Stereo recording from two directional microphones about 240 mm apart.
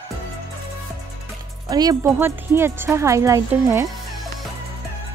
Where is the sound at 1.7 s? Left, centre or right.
Centre.